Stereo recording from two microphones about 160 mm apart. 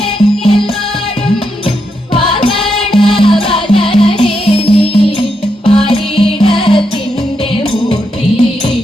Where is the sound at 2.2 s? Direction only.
30° left (ahead or behind).